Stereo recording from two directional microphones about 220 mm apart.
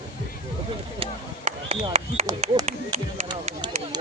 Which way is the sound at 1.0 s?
30° right (ahead or behind).